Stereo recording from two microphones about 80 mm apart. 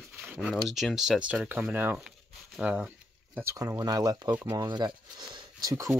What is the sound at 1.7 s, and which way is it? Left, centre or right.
Speech, right.